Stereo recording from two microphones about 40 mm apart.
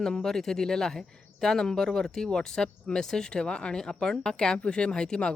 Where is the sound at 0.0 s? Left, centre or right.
Centre.